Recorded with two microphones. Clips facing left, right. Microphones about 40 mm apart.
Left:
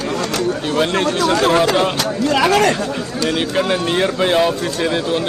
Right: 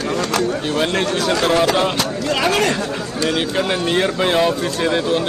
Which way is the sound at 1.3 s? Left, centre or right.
Left.